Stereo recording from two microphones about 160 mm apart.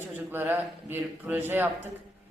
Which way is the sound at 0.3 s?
15° right (ahead or behind).